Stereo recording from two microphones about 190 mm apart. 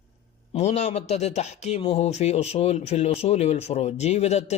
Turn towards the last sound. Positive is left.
turn(degrees=35)  # may be behind; listen again after turning